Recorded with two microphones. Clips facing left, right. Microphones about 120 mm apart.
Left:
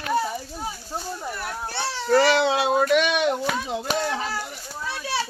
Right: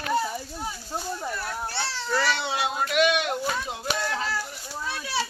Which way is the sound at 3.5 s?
65° left (ahead or behind).